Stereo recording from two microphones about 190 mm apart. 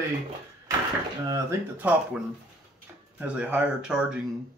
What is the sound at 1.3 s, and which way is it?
Speech, 10° right (ahead or behind).